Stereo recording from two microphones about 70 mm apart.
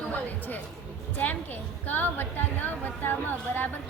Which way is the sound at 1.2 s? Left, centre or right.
Left.